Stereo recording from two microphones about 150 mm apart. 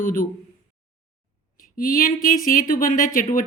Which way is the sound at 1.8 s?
70° left (ahead or behind).